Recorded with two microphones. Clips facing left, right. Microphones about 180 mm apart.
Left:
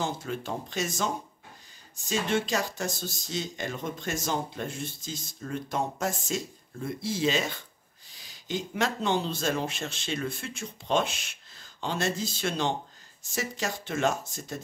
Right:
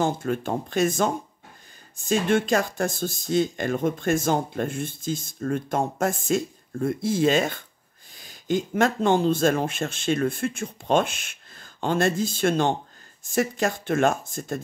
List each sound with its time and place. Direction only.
0.0 s speech: 50° right (ahead or behind)